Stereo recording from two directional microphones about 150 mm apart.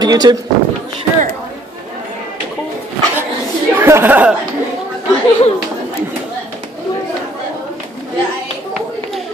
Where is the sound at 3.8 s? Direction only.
15° right (ahead or behind).